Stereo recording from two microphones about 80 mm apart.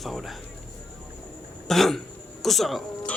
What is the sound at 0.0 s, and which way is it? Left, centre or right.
Speech, centre.